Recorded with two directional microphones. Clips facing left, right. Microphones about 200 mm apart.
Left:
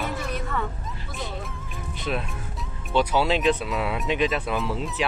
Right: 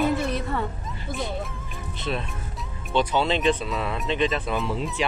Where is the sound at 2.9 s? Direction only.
5° left (ahead or behind).